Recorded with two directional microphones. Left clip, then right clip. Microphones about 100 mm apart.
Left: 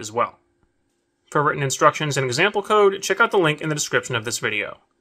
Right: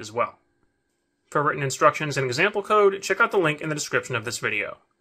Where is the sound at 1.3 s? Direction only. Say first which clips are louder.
Left 3 dB; 30° left (ahead or behind).